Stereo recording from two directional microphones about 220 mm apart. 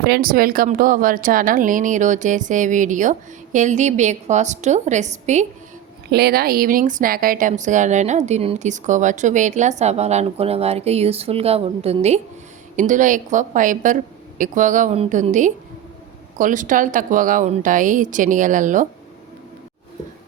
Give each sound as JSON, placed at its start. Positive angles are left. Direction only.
{"t": 0.0, "sound": "speech", "side_deg": -45}
{"t": 6.1, "sound": "speech", "side_deg": -45}